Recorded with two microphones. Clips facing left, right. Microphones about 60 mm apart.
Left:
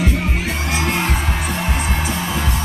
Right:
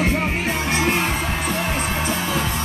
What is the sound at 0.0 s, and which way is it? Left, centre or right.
Music, right.